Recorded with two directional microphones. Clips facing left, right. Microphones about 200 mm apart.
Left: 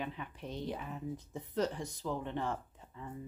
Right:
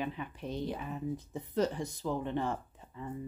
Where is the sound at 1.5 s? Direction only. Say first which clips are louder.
Right 3 dB; 5° right (ahead or behind).